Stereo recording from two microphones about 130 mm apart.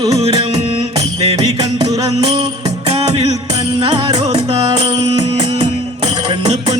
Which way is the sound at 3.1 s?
30° right (ahead or behind).